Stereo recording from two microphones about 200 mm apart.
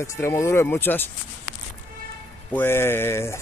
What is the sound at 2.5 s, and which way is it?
Speech, 10° left (ahead or behind).